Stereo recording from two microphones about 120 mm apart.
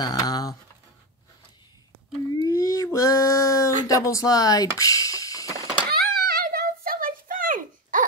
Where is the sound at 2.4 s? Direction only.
30° left (ahead or behind).